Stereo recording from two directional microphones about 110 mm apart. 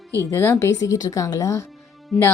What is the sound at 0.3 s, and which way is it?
A woman's voice, 25° left (ahead or behind).